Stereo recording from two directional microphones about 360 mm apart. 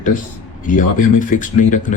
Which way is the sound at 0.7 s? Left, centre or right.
Left.